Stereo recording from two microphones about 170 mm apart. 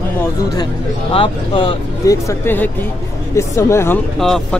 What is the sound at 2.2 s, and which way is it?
Speech, 10° left (ahead or behind).